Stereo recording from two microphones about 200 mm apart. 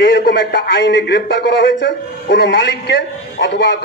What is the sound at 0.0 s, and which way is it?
A man's voice, 50° left (ahead or behind).